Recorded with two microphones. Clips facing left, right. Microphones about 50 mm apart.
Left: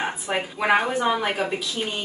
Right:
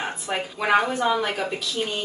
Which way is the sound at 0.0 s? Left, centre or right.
Centre.